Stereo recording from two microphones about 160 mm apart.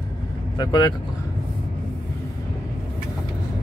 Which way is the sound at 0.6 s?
25° left (ahead or behind).